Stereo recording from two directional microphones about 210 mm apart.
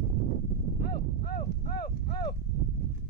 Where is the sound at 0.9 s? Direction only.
45° left (ahead or behind).